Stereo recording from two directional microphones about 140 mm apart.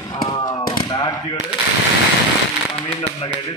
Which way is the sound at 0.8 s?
30° left (ahead or behind).